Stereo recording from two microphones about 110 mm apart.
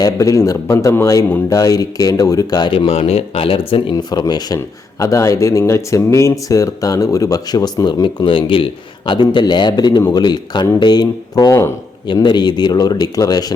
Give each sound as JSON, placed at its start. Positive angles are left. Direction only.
{"t": 0.0, "sound": "speech", "side_deg": 30}
{"t": 2.7, "sound": "speech", "side_deg": 55}
{"t": 8.0, "sound": "speech", "side_deg": 50}